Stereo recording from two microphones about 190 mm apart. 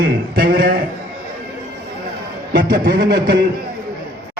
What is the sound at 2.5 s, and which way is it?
Speech, 50° right (ahead or behind).